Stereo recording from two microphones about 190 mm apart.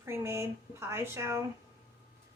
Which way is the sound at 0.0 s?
15° right (ahead or behind).